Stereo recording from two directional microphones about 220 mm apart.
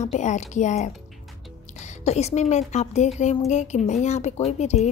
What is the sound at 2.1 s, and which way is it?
A woman's voice, 30° left (ahead or behind).